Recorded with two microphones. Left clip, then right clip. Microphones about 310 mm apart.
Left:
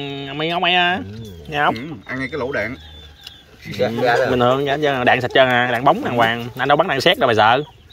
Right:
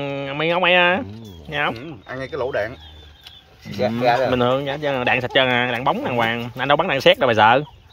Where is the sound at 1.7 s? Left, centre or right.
Centre.